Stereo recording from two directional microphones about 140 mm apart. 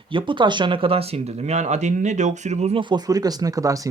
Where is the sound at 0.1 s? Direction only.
35° right (ahead or behind).